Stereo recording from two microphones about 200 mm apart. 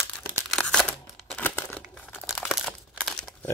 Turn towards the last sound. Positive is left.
turn(degrees=5)  # may be behind; listen again after turning